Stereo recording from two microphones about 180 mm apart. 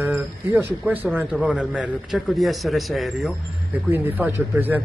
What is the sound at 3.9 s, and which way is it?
Speech, 10° right (ahead or behind).